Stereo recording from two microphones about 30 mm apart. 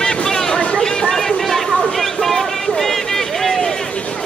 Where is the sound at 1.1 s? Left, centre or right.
Centre.